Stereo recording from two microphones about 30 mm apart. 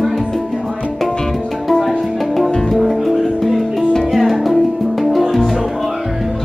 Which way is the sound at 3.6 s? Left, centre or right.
Centre.